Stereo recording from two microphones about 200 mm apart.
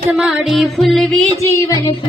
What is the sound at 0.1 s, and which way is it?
Music, centre (ahead or behind).